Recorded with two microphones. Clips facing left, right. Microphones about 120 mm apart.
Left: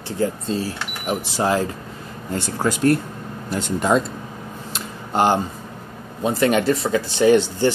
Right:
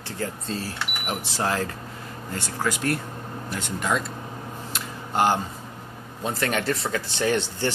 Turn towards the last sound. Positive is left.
turn(degrees=10)  # may be behind; listen again after turning